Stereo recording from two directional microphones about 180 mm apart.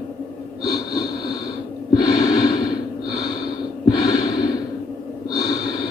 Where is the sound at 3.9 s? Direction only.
20° left (ahead or behind).